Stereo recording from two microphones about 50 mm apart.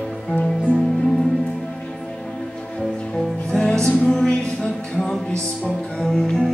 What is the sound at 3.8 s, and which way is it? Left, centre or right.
Music, centre.